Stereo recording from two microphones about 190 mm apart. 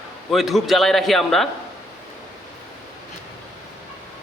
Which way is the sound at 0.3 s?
Centre (ahead or behind).